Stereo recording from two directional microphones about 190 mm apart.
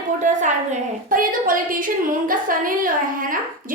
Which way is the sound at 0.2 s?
40° right (ahead or behind).